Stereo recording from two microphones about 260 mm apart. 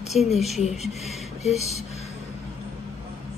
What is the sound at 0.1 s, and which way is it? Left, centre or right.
Speech, centre.